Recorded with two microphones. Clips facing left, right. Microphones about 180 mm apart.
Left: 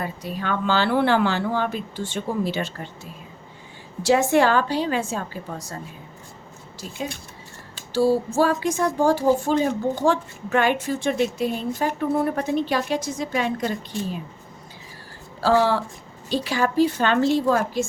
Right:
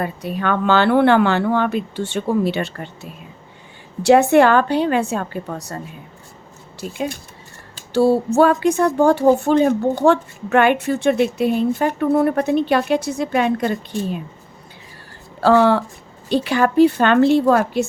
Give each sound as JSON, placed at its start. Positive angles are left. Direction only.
{"t": 0.0, "sound": "a woman's voice", "side_deg": -60}
{"t": 7.9, "sound": "a woman's voice", "side_deg": -65}
{"t": 15.4, "sound": "a woman's voice", "side_deg": -60}